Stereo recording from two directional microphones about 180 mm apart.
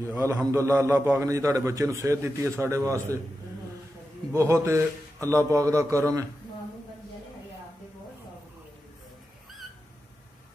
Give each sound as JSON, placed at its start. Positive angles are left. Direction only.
{"t": 0.0, "sound": "a man's voice", "side_deg": -15}
{"t": 4.3, "sound": "a man's voice", "side_deg": -15}